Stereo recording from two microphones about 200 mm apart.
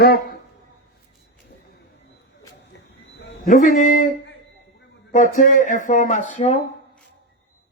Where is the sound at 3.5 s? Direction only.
40° left (ahead or behind).